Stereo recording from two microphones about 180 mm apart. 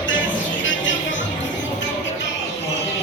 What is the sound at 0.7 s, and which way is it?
Music, 90° left.